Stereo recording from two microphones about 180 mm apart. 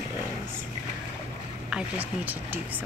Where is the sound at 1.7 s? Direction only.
5° right (ahead or behind).